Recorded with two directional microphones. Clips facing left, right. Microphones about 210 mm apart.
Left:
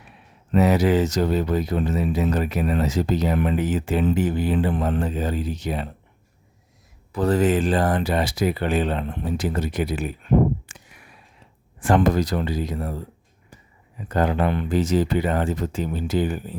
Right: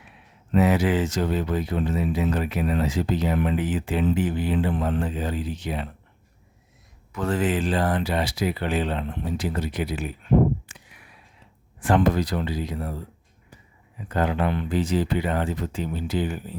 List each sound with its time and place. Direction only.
0.5 s speech: 40° left (ahead or behind)
7.1 s speech: 35° left (ahead or behind)
10.7 s a sound: 45° left (ahead or behind)
11.8 s speech: 45° left (ahead or behind)
14.1 s speech: 45° left (ahead or behind)